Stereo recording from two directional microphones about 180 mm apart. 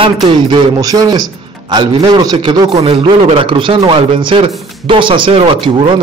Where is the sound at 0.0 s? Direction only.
25° right (ahead or behind).